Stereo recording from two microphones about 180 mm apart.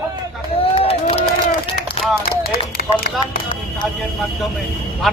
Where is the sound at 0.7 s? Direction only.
35° left (ahead or behind).